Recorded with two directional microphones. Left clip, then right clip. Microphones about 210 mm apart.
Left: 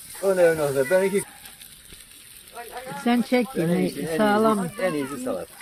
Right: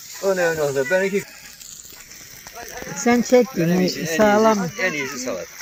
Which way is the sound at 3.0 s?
40° right (ahead or behind).